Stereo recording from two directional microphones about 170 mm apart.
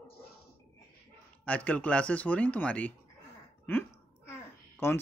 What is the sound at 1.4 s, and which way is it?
A man's voice, 10° left (ahead or behind).